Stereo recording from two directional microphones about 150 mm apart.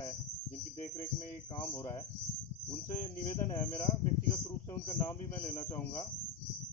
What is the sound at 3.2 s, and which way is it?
Speech, 25° left (ahead or behind).